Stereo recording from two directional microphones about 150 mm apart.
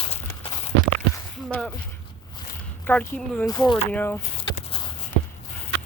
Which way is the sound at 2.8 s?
10° left (ahead or behind).